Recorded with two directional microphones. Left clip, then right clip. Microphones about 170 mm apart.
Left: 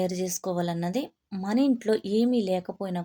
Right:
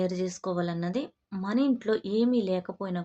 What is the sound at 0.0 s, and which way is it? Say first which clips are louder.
A woman's voice: left 1 dB; 20° left (ahead or behind).